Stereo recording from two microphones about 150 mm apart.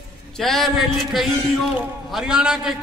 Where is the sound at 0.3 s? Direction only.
Centre (ahead or behind).